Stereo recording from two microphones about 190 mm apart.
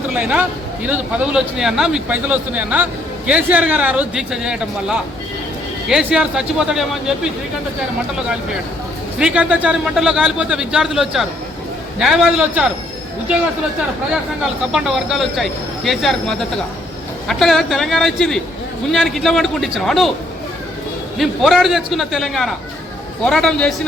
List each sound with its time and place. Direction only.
0.1 s a man's voice: 5° right (ahead or behind)
9.1 s speech: 5° right (ahead or behind)
14.1 s speech: 5° right (ahead or behind)
21.2 s speech: centre (ahead or behind)